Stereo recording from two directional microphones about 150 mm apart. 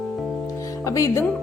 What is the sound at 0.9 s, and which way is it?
Speech, 20° left (ahead or behind).